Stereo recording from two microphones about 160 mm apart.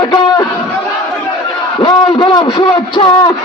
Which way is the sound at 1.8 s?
30° left (ahead or behind).